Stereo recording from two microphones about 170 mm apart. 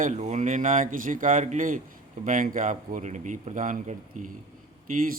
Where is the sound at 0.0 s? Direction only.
45° right (ahead or behind).